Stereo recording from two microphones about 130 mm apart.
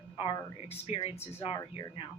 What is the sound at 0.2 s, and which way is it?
Speech, 45° left (ahead or behind).